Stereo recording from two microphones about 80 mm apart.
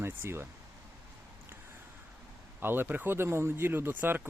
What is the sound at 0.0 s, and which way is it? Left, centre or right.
Speech, right.